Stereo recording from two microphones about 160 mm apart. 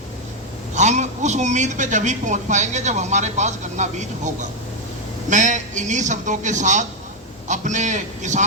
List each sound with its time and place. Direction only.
0.7 s a man's voice: 45° right (ahead or behind)